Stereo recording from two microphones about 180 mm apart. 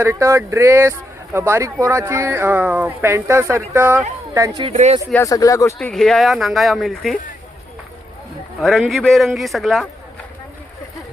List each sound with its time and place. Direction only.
0.0 s speech: 15° right (ahead or behind)
4.7 s speech: 40° right (ahead or behind)
5.1 s speech: 15° left (ahead or behind)
5.8 s speech: 5° left (ahead or behind)
8.6 s speech: centre (ahead or behind)